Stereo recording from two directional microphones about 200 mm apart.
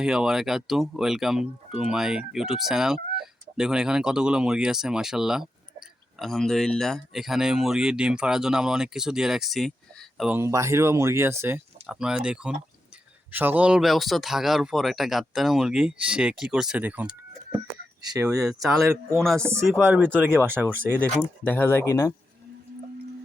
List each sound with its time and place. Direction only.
0.0 s speech: 5° right (ahead or behind)
10.3 s speech: 15° right (ahead or behind)
18.3 s speech: 5° right (ahead or behind)
19.7 s speech: 10° right (ahead or behind)
21.4 s speech: 10° left (ahead or behind)